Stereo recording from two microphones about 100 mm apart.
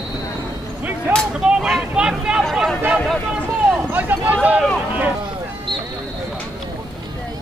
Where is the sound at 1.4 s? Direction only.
10° right (ahead or behind).